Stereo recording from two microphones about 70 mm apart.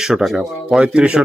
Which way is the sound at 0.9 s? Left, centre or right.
Centre.